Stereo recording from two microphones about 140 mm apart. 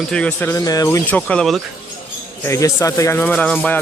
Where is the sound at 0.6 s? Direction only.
25° left (ahead or behind).